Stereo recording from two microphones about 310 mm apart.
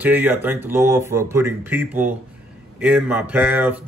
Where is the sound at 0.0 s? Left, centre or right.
Centre.